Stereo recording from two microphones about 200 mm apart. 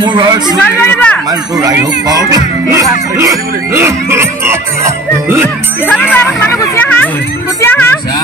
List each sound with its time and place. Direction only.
0.0 s a man's voice: 25° right (ahead or behind)
0.8 s speech: 10° left (ahead or behind)
1.6 s speech: 20° right (ahead or behind)
6.1 s speech: 10° left (ahead or behind)
7.6 s a sound: 10° left (ahead or behind)